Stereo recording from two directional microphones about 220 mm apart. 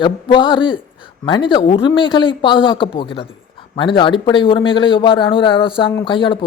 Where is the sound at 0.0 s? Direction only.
20° left (ahead or behind).